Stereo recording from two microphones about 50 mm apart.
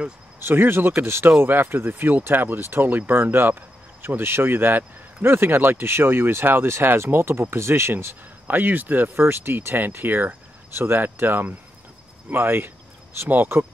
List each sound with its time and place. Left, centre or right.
0.4 s speech: right
8.5 s speech: right
9.1 s speech: right